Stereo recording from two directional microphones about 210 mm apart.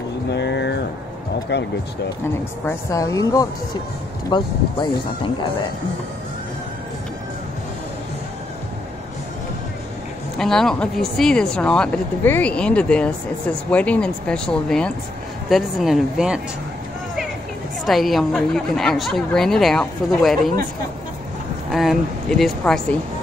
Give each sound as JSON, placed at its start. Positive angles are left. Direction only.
{"t": 0.3, "sound": "a sound", "side_deg": 55}
{"t": 1.5, "sound": "speech", "side_deg": 50}
{"t": 2.6, "sound": "a woman's voice", "side_deg": 15}
{"t": 10.3, "sound": "speech", "side_deg": 0}
{"t": 17.8, "sound": "speech", "side_deg": 0}
{"t": 21.7, "sound": "speech", "side_deg": 0}